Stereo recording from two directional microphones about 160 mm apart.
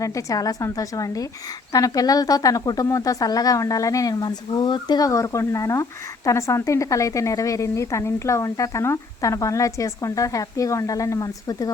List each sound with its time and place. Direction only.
0.0 s speech: 20° left (ahead or behind)